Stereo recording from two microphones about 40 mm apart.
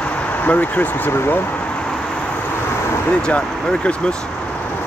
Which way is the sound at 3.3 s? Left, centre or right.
Left.